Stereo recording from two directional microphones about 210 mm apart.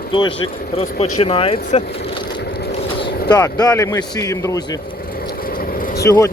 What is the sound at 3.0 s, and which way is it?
Vehicle, 20° left (ahead or behind).